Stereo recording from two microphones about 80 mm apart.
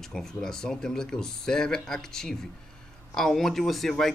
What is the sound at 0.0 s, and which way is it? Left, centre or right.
Speech, centre.